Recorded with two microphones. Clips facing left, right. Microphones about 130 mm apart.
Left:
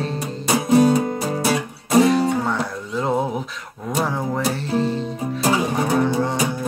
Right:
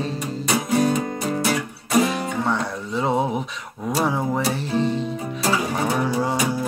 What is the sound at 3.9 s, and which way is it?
Music, centre (ahead or behind).